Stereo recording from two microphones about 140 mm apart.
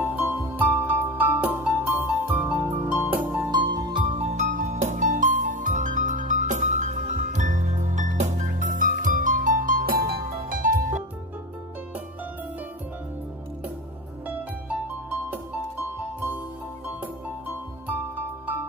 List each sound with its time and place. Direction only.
0.0 s music: 10° right (ahead or behind)
3.4 s music: 30° right (ahead or behind); by 11.0 s 70° right (ahead or behind)
16.8 s music: 15° right (ahead or behind)